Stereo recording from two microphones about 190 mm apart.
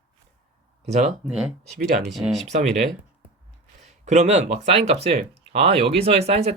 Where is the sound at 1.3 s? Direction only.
5° right (ahead or behind).